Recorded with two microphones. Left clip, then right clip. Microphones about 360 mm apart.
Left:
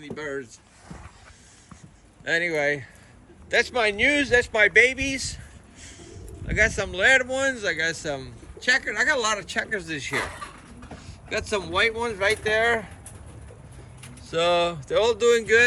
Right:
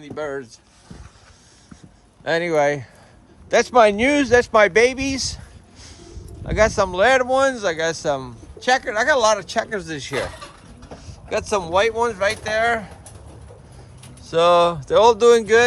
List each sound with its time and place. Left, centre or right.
2.2 s speech: centre
14.3 s speech: centre